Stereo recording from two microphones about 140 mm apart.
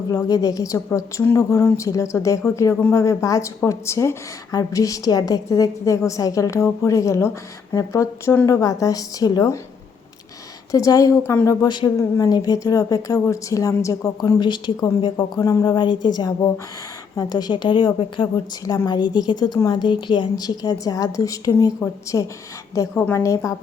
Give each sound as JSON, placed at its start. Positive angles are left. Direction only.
{"t": 0.1, "sound": "speech", "side_deg": 25}
{"t": 10.7, "sound": "a woman's voice", "side_deg": 25}
{"t": 18.6, "sound": "speech", "side_deg": 25}